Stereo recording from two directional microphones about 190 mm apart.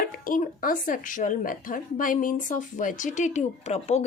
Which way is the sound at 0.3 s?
45° left (ahead or behind).